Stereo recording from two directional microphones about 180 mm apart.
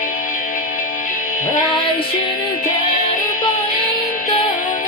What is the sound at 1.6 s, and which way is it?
Music, 25° left (ahead or behind).